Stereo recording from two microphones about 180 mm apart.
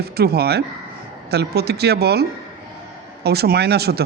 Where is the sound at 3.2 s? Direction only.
60° right (ahead or behind).